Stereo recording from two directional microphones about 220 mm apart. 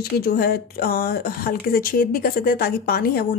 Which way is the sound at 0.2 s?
45° left (ahead or behind).